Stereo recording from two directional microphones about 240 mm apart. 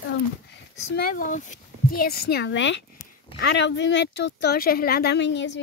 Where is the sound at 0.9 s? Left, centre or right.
Left.